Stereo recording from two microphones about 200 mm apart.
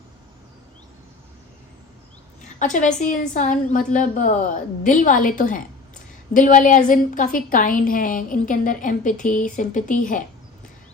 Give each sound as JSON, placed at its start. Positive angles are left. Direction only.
{"t": 2.6, "sound": "a woman's voice", "side_deg": 40}